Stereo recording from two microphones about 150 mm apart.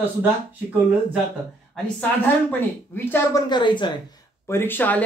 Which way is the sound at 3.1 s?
15° left (ahead or behind).